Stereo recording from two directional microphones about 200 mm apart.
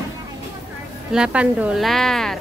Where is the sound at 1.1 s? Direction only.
5° right (ahead or behind).